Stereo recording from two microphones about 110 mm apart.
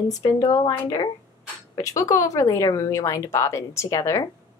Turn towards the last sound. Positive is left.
turn(degrees=30)  # may be behind; listen again after turning